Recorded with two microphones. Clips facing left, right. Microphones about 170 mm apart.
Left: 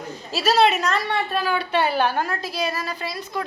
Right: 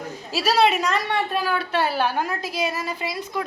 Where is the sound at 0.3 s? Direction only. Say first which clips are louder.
Left 1 dB; 10° right (ahead or behind).